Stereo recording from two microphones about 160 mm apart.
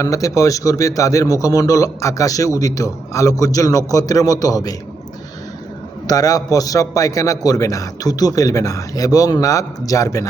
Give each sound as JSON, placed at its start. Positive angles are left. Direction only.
{"t": 0.0, "sound": "a man's voice", "side_deg": 20}
{"t": 6.1, "sound": "a man's voice", "side_deg": 20}